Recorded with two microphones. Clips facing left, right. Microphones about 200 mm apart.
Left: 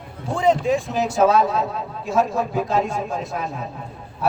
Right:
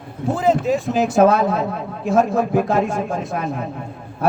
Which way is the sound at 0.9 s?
55° right (ahead or behind).